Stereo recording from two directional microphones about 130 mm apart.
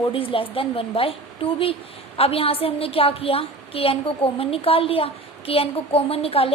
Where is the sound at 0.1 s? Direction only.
45° left (ahead or behind).